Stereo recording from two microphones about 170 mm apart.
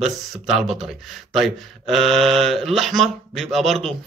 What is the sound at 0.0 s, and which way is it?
Speech, 5° right (ahead or behind).